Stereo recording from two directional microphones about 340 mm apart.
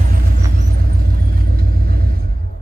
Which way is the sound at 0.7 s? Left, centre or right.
Right.